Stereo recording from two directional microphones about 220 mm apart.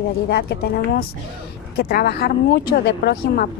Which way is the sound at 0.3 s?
45° left (ahead or behind).